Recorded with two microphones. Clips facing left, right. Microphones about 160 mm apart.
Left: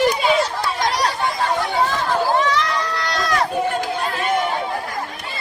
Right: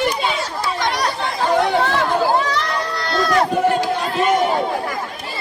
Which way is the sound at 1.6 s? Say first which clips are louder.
Right 3 dB; 70° right (ahead or behind).